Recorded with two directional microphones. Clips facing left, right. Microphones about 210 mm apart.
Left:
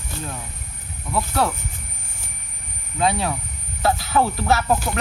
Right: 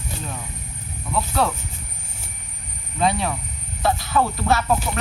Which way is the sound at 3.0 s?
5° left (ahead or behind).